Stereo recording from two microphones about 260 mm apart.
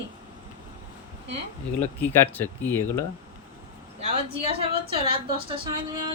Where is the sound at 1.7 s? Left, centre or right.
Centre.